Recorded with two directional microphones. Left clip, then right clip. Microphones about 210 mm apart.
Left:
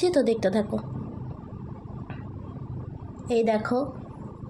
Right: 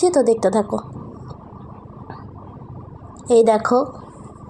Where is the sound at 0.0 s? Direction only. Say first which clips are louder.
Right 7 dB; 10° left (ahead or behind).